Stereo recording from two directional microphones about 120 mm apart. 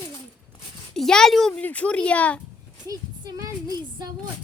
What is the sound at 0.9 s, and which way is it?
Speech, 5° left (ahead or behind).